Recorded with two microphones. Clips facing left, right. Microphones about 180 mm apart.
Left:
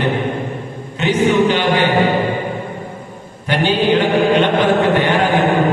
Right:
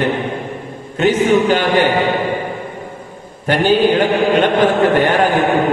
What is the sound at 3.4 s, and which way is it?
Mantra, 45° right (ahead or behind).